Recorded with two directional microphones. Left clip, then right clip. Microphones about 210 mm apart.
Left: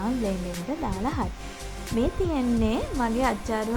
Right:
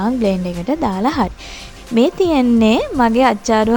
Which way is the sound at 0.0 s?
45° right (ahead or behind).